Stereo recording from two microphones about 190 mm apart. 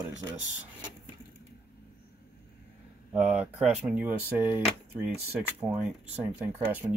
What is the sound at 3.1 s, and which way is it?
Speech, 5° right (ahead or behind).